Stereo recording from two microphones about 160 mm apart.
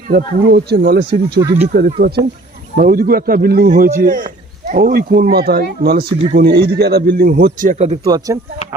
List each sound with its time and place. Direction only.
0.1 s speech: 75° right (ahead or behind)
2.7 s speech: 65° right (ahead or behind); by 7.9 s 45° right (ahead or behind)
8.0 s speech: 25° right (ahead or behind)